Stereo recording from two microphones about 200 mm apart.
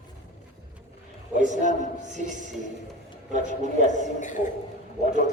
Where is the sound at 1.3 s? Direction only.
40° right (ahead or behind).